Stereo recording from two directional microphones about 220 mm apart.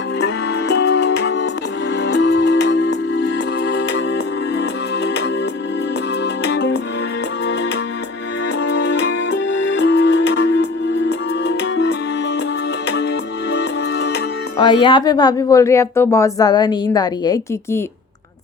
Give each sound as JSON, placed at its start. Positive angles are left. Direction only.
{"t": 0.7, "sound": "music", "side_deg": 50}
{"t": 6.5, "sound": "music", "side_deg": 55}
{"t": 9.7, "sound": "music", "side_deg": 50}
{"t": 13.5, "sound": "music", "side_deg": 50}
{"t": 14.6, "sound": "speech", "side_deg": 20}